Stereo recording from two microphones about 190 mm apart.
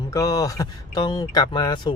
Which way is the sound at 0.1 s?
20° left (ahead or behind).